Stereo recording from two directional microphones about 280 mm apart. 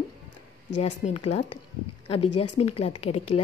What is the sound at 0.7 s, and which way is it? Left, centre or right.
A woman's voice, left.